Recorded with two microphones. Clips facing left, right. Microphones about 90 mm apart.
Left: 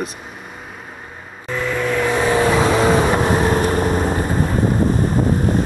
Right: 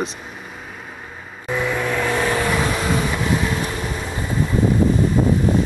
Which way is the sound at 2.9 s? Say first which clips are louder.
Left 5 dB; 45° left (ahead or behind).